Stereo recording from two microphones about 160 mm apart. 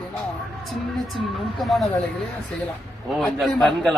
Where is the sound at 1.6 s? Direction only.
Centre (ahead or behind).